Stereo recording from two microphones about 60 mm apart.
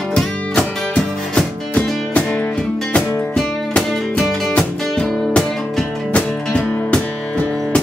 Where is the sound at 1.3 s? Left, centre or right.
Centre.